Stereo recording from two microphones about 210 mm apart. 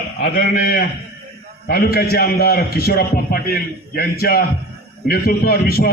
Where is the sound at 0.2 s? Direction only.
45° left (ahead or behind).